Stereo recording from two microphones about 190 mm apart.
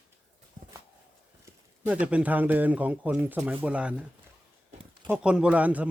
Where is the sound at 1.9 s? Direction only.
5° right (ahead or behind).